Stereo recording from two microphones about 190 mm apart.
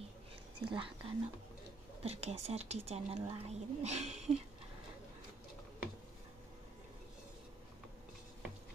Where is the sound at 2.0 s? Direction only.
35° right (ahead or behind).